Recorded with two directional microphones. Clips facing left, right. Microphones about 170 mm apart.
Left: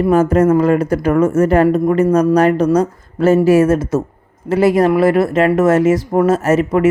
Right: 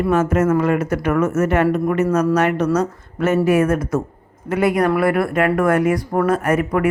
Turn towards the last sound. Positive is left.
turn(degrees=25)  # may be behind; listen again after turning